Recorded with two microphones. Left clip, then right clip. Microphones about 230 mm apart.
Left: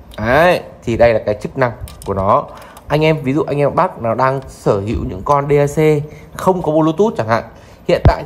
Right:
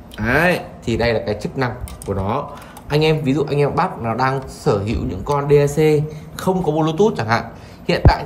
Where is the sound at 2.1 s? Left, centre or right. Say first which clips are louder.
Left 10 dB; left.